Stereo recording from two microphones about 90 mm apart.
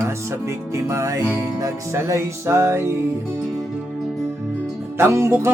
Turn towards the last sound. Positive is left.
turn(degrees=-20)  # may be behind; listen again after turning